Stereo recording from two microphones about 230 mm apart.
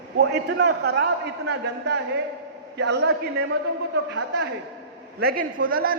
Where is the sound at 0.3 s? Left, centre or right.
Right.